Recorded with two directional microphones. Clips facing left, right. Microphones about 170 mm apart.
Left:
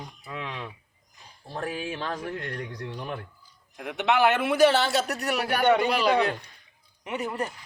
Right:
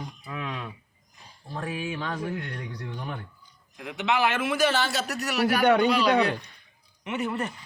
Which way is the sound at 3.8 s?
60° left (ahead or behind).